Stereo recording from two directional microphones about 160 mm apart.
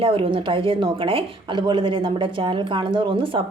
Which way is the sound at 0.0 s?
35° right (ahead or behind).